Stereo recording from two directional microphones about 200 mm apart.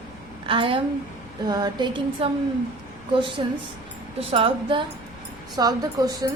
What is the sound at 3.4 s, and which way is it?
A woman's voice, 25° right (ahead or behind).